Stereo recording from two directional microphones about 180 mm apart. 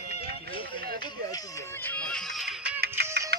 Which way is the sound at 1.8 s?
10° left (ahead or behind).